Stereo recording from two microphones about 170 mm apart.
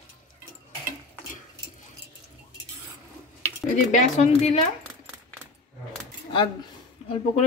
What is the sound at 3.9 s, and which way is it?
Speech, 45° left (ahead or behind).